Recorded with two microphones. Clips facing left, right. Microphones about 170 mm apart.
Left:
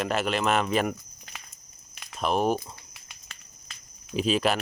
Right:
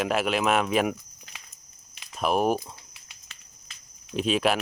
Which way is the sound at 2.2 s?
5° right (ahead or behind).